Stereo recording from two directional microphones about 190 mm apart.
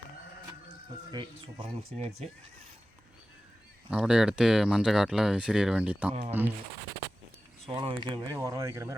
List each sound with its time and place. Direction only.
1.1 s speech: 25° right (ahead or behind)
3.8 s speech: 5° right (ahead or behind)
7.7 s speech: 25° right (ahead or behind)